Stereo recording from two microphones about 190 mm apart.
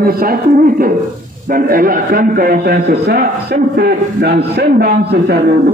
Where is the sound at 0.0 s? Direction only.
50° right (ahead or behind).